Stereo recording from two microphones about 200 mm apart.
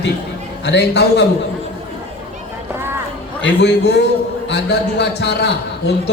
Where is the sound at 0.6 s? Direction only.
55° left (ahead or behind).